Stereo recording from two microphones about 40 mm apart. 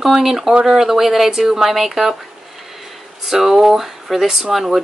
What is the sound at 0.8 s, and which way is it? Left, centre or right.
Speech, centre.